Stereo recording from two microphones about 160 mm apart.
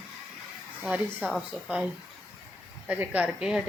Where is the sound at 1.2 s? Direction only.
5° right (ahead or behind).